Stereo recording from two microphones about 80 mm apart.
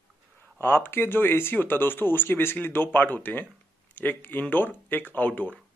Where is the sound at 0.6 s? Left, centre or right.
Left.